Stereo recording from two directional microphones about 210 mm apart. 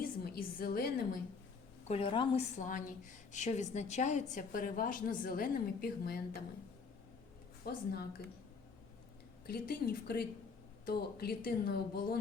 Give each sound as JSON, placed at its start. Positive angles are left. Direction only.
{"t": 0.3, "sound": "a sound", "side_deg": 45}
{"t": 1.9, "sound": "a woman's voice", "side_deg": 25}
{"t": 2.6, "sound": "a woman's voice", "side_deg": 40}
{"t": 7.6, "sound": "speech", "side_deg": 45}
{"t": 9.5, "sound": "speech", "side_deg": 50}